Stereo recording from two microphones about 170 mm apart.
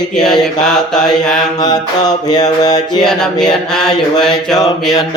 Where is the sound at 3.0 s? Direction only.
5° left (ahead or behind).